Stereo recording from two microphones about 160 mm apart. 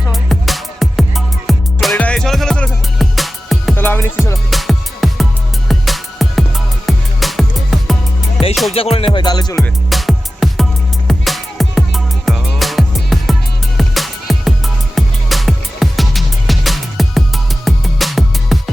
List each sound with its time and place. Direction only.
0.1 s music: centre (ahead or behind)
3.8 s music: 15° left (ahead or behind)
4.5 s music: centre (ahead or behind)
8.7 s music: 35° left (ahead or behind)
9.1 s music: 25° left (ahead or behind)
9.6 s music: centre (ahead or behind)